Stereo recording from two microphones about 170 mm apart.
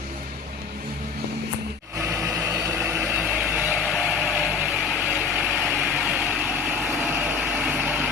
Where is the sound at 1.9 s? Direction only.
15° right (ahead or behind).